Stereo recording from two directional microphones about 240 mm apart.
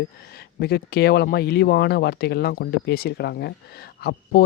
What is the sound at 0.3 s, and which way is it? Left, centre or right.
Speech, left.